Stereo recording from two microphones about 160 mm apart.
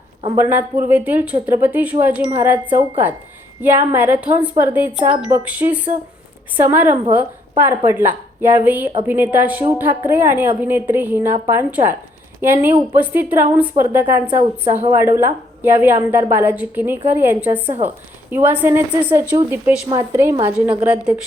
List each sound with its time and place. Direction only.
0.3 s a woman's voice: 15° right (ahead or behind)